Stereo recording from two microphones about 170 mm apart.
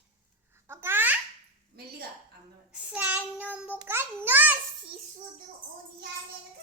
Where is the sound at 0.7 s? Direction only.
15° right (ahead or behind).